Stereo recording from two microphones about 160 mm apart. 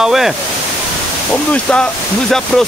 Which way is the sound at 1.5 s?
5° left (ahead or behind).